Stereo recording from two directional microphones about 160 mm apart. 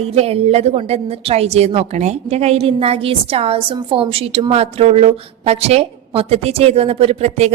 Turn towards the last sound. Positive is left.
turn(degrees=-40)  # may be behind; listen again after turning